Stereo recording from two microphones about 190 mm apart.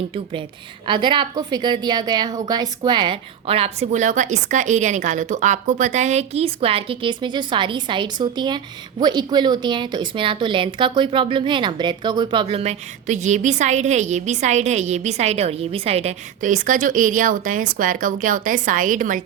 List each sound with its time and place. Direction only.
0.9 s a woman's voice: 25° right (ahead or behind); by 19.2 s 45° right (ahead or behind)